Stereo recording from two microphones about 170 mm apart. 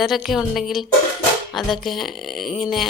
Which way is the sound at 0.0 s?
Centre (ahead or behind).